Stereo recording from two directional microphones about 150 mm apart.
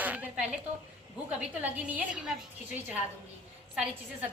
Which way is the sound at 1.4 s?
10° right (ahead or behind).